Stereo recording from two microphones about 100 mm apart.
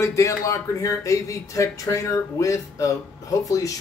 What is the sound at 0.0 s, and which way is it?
Speech, 30° left (ahead or behind).